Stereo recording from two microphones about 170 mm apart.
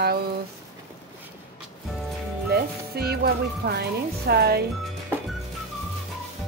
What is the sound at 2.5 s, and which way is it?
Speech, 65° right (ahead or behind).